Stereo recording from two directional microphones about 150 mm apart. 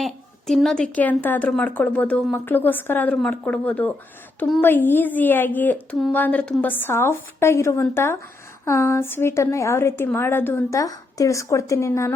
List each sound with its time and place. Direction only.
0.0 s a woman's voice: centre (ahead or behind)
4.6 s a woman's voice: 15° left (ahead or behind)